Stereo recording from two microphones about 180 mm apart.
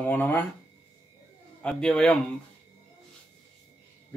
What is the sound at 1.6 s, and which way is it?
Speech, 5° left (ahead or behind).